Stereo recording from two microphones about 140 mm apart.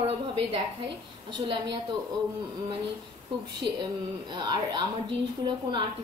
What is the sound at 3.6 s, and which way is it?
A woman's voice, 35° right (ahead or behind).